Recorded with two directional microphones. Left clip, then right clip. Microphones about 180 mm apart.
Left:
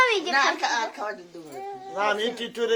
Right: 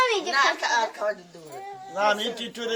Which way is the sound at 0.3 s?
25° left (ahead or behind).